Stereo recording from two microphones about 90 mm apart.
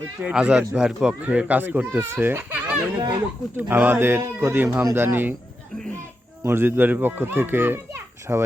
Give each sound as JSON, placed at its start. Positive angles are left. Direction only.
{"t": 0.2, "sound": "a child's voice", "side_deg": -15}
{"t": 6.4, "sound": "a child's voice", "side_deg": -25}